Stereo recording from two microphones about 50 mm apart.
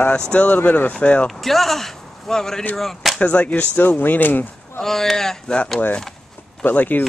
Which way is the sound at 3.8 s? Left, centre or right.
Left.